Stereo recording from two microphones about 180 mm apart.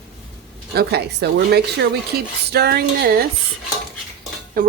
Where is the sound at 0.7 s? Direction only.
60° right (ahead or behind).